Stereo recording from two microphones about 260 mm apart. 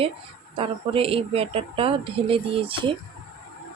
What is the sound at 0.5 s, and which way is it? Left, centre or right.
Speech, right.